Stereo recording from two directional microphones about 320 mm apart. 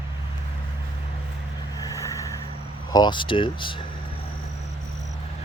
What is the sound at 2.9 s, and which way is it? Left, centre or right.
Speech, centre.